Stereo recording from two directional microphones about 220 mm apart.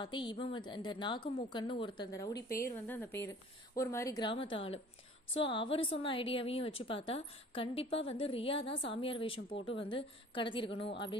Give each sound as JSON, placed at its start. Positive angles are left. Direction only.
{"t": 0.0, "sound": "a woman's voice", "side_deg": 20}